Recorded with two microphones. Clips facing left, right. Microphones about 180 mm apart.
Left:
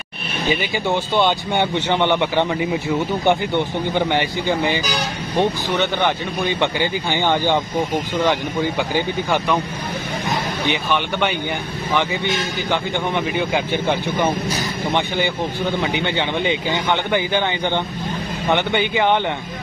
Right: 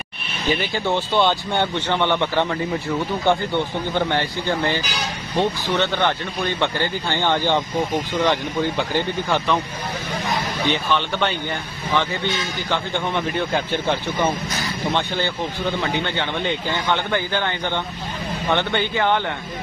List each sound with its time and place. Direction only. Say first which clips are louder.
0.5 s speech: left 1 dB; 15° left (ahead or behind)
10.7 s speech: even; 15° left (ahead or behind)
12.7 s speech: left 1 dB; 10° left (ahead or behind)